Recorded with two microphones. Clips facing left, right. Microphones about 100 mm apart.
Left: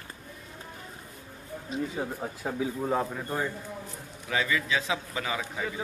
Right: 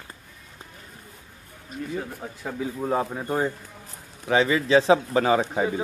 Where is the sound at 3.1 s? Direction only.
25° right (ahead or behind); by 5.4 s 40° right (ahead or behind).